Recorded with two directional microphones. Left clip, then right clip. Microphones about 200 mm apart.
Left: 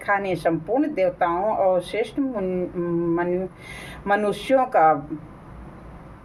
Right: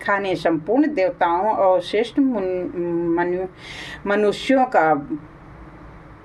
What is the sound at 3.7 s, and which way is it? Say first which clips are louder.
A woman's voice: even; 35° right (ahead or behind).